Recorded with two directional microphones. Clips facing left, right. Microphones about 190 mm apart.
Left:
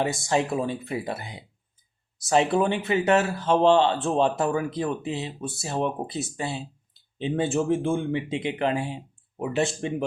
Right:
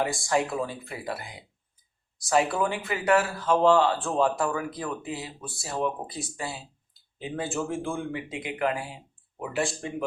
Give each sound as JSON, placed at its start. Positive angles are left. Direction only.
{"t": 0.0, "sound": "speech", "side_deg": 20}